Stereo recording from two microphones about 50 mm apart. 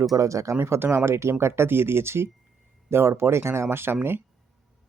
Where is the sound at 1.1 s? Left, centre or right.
Right.